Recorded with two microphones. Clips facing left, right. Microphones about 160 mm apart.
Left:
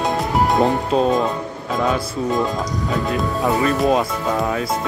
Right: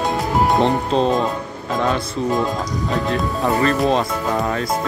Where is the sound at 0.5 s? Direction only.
5° left (ahead or behind).